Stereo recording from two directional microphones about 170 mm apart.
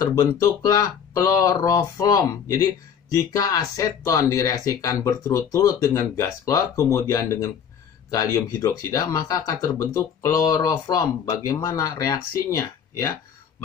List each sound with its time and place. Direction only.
0.0 s speech: 15° left (ahead or behind)